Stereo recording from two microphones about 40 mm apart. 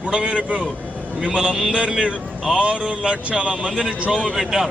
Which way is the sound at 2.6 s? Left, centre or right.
Right.